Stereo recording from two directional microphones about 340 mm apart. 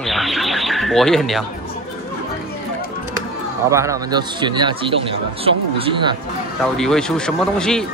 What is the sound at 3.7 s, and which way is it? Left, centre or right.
Speech, centre.